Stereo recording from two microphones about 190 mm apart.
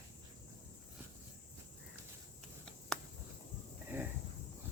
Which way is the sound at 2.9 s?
5° left (ahead or behind).